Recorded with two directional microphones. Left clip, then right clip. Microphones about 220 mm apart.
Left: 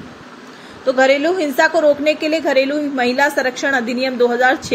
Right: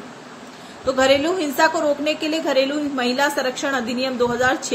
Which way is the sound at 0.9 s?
10° left (ahead or behind).